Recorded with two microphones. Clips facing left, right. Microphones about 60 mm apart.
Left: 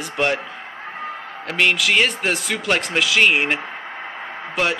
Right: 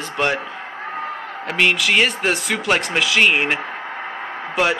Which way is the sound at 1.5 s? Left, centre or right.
Centre.